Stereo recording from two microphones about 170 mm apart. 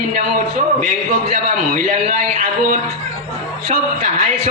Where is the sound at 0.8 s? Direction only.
40° right (ahead or behind).